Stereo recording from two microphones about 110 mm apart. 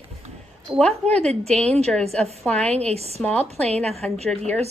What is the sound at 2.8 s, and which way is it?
Speech, 70° right (ahead or behind).